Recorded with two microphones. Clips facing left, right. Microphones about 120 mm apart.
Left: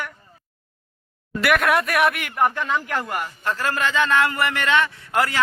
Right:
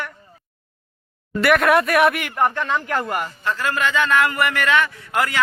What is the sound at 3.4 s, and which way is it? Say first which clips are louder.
A man's voice: right 1 dB; 40° left (ahead or behind).